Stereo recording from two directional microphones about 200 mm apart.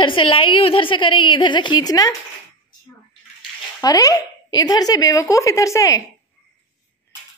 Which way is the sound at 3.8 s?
15° left (ahead or behind).